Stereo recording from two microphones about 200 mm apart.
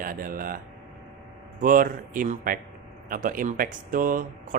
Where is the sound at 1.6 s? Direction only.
45° right (ahead or behind).